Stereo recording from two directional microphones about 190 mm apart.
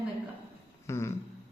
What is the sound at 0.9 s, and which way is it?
Speech, 15° left (ahead or behind).